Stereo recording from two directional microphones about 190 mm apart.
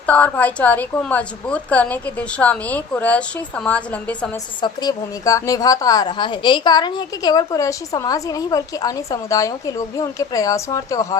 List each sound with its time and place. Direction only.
0.0 s a woman's voice: 5° left (ahead or behind)
4.6 s a woman's voice: 20° left (ahead or behind)